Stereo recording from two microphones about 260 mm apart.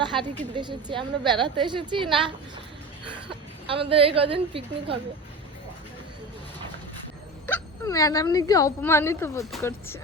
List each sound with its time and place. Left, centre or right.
0.0 s a woman's voice: centre
3.2 s a woman's voice: right
7.4 s speech: centre